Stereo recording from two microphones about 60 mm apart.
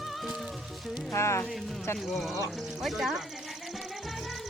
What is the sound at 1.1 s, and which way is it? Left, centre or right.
Speech, left.